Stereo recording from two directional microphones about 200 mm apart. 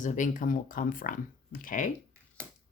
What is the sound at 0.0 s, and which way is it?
Speech, 40° left (ahead or behind).